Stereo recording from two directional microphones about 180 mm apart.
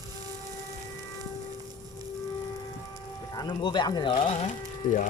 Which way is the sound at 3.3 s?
25° left (ahead or behind).